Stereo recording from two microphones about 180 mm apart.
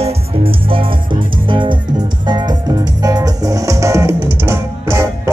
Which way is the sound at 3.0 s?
20° right (ahead or behind).